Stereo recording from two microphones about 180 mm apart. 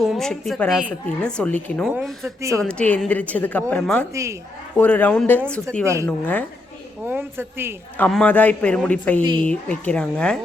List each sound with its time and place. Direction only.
0.0 s a woman's voice: centre (ahead or behind)
4.1 s a man's voice: 15° right (ahead or behind)
4.8 s a woman's voice: 10° left (ahead or behind)
5.8 s a man's voice: 15° right (ahead or behind)
6.1 s a woman's voice: 10° left (ahead or behind)
7.1 s a man's voice: 10° right (ahead or behind)
7.9 s a woman's voice: 5° left (ahead or behind)